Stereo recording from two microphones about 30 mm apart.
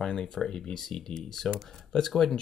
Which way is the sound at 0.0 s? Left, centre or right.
Left.